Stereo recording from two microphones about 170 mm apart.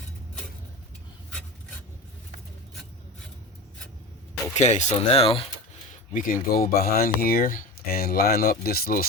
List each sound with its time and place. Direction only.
4.5 s speech: 45° left (ahead or behind)
5.9 s speech: 50° left (ahead or behind)